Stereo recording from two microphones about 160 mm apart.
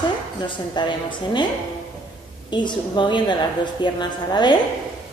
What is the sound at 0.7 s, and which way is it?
Speech, 30° left (ahead or behind).